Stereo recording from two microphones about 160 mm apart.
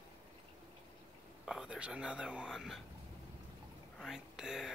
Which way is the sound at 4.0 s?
Centre (ahead or behind).